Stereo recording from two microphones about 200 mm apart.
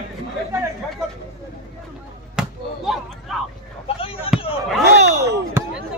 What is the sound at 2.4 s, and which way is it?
Basketball bounce, 5° right (ahead or behind).